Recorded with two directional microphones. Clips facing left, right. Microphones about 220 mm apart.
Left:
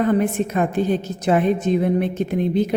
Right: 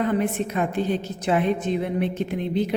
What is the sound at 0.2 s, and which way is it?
A woman's voice, 45° left (ahead or behind).